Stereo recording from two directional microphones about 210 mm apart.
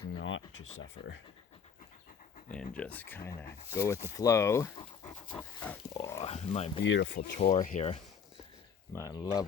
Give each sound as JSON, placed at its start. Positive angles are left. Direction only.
{"t": 0.2, "sound": "speech", "side_deg": 65}
{"t": 2.7, "sound": "speech", "side_deg": 5}
{"t": 6.0, "sound": "speech", "side_deg": 25}
{"t": 6.8, "sound": "speech", "side_deg": 60}
{"t": 7.3, "sound": "speech", "side_deg": 35}
{"t": 8.9, "sound": "speech", "side_deg": 15}